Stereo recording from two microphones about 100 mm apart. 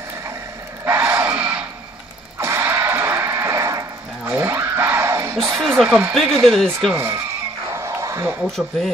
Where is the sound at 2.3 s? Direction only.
25° right (ahead or behind).